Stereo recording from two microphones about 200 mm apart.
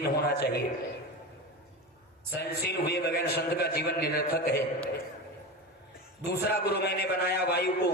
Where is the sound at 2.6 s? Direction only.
55° left (ahead or behind).